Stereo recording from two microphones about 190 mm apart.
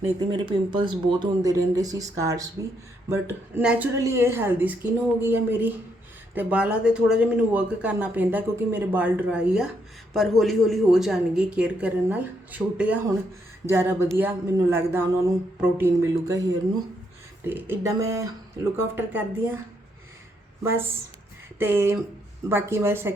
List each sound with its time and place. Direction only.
0.3 s speech: 25° right (ahead or behind)
17.4 s speech: 10° right (ahead or behind)
21.6 s speech: 10° right (ahead or behind)